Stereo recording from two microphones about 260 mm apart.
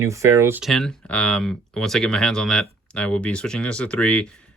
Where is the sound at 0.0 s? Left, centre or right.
Centre.